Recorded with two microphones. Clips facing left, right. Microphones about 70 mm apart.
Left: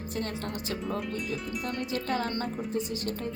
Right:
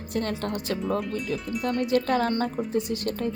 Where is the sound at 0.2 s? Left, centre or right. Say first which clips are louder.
Right 6 dB; right.